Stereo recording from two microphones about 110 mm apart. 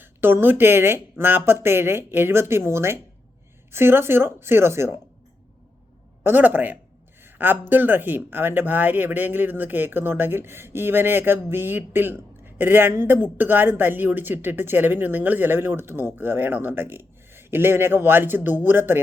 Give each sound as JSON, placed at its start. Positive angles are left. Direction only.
{"t": 0.0, "sound": "speech", "side_deg": -20}
{"t": 6.2, "sound": "speech", "side_deg": -15}
{"t": 7.2, "sound": "a sound", "side_deg": -20}
{"t": 7.7, "sound": "speech", "side_deg": -15}